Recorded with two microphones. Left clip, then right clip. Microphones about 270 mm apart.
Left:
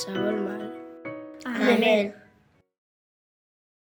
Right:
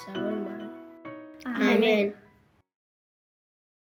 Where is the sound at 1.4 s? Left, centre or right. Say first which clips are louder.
Left 3 dB; centre.